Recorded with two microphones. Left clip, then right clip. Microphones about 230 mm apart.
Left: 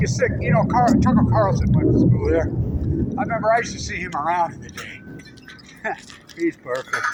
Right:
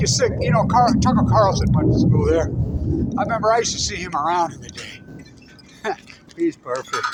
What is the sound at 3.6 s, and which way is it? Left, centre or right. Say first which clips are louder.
A man's voice: right 4 dB; right.